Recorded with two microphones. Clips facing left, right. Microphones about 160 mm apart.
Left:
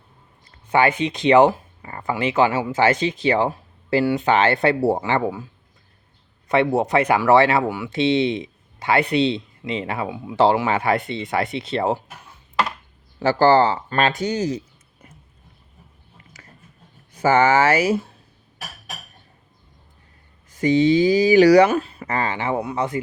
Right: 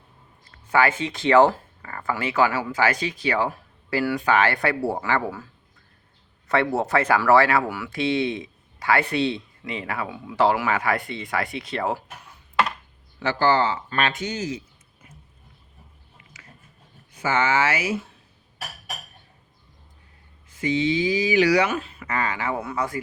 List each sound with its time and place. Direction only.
0.7 s speech: 20° left (ahead or behind)
6.5 s speech: 20° left (ahead or behind)
13.1 s speech: 35° left (ahead or behind)
16.1 s a sound: 40° left (ahead or behind)
17.2 s speech: 40° left (ahead or behind)
20.5 s speech: 40° left (ahead or behind); by 23.0 s 25° left (ahead or behind)